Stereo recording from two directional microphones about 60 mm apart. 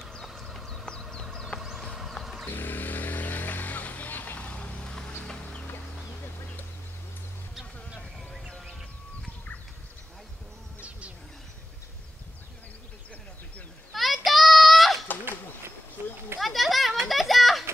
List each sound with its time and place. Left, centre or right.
0.0 s clip-clop: centre
1.2 s vehicle: centre
1.6 s vehicle: centre
1.9 s a sound: centre
2.4 s vehicle: left
5.2 s a sound: centre
7.5 s music: centre
13.9 s children playing: centre
16.3 s children playing: centre